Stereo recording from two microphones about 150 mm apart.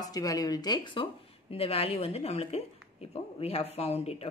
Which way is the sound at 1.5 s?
40° left (ahead or behind).